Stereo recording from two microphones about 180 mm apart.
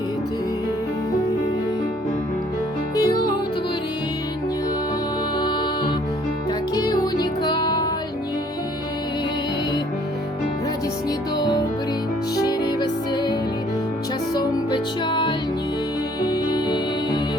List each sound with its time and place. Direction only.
2.9 s music: 20° left (ahead or behind)
5.4 s music: 25° left (ahead or behind)
11.3 s music: 25° left (ahead or behind)
14.3 s music: 25° left (ahead or behind)